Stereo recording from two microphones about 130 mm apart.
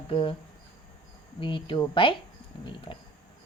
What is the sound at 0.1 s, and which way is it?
Speech, 40° left (ahead or behind).